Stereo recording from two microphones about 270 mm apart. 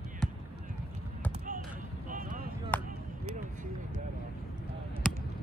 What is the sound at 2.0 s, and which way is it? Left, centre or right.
Vehicle, right.